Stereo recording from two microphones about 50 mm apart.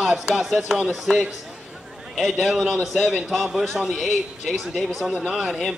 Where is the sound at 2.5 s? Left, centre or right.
Centre.